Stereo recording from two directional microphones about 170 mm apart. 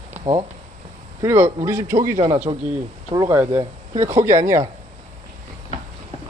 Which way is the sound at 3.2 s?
15° right (ahead or behind).